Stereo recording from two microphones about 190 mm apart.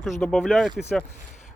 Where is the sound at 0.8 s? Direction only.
15° left (ahead or behind).